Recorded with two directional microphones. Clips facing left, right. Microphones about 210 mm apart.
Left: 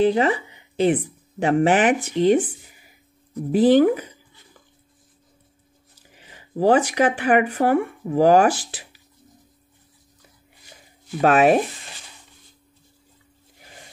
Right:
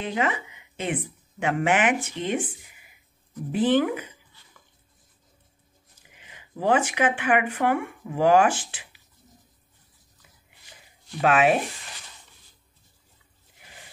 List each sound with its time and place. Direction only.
0.0 s speech: 35° left (ahead or behind)
5.9 s speech: 35° left (ahead or behind)
11.1 s speech: 40° left (ahead or behind)